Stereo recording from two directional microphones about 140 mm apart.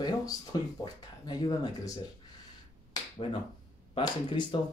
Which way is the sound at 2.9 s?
35° left (ahead or behind).